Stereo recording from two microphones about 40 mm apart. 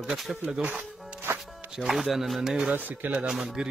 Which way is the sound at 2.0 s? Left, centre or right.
Centre.